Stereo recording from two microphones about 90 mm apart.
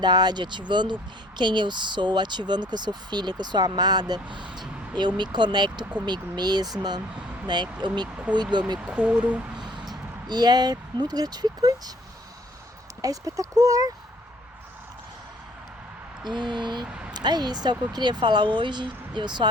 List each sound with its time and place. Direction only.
0.0 s speech: 50° right (ahead or behind)
8.1 s speech: 15° right (ahead or behind)
8.4 s speech: 55° right (ahead or behind)
8.8 s speech: 10° right (ahead or behind)
9.6 s a sound: 55° right (ahead or behind)
9.9 s speech: 55° right (ahead or behind)
13.0 s speech: 40° right (ahead or behind)
16.2 s speech: 55° right (ahead or behind)
16.8 s a sound: 10° right (ahead or behind)
17.2 s speech: 55° right (ahead or behind)